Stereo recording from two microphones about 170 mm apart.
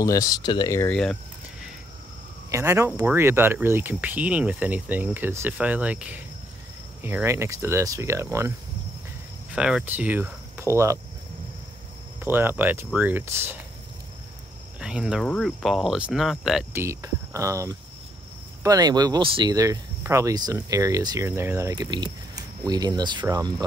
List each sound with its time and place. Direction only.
0.0 s speech: 20° left (ahead or behind)
0.8 s speech: 5° left (ahead or behind)
2.5 s speech: 15° right (ahead or behind)
9.6 s speech: 5° right (ahead or behind)
12.2 s speech: 10° right (ahead or behind)
14.8 s speech: 5° right (ahead or behind)
16.7 s speech: 15° right (ahead or behind)